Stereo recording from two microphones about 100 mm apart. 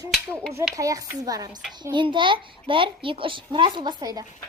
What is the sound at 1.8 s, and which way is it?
A child's voice, 50° right (ahead or behind).